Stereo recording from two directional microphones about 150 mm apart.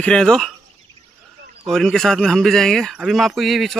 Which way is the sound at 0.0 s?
5° left (ahead or behind).